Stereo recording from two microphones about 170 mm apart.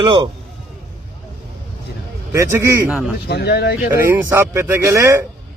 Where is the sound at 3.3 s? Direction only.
75° left (ahead or behind).